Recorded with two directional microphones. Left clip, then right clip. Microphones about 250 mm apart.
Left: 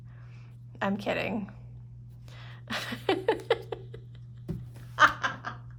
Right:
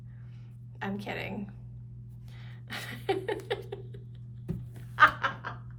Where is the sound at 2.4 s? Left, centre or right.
Centre.